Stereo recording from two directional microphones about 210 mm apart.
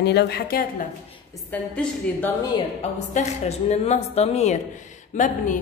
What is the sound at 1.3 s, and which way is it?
A woman's voice, 10° left (ahead or behind).